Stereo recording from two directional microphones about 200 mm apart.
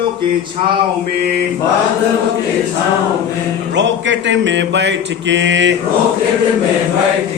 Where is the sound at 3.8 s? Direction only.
65° right (ahead or behind).